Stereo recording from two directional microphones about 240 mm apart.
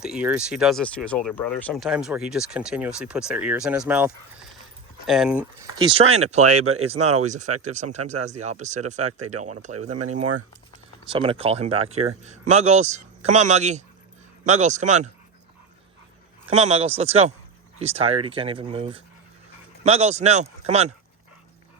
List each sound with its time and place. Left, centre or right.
0.0 s speech: centre
5.8 s speech: right
6.4 s speech: right
6.8 s speech: right
9.9 s speech: right
11.1 s speech: right
16.5 s speech: right